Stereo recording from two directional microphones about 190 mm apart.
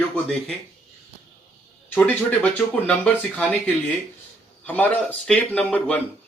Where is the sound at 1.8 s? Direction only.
10° left (ahead or behind).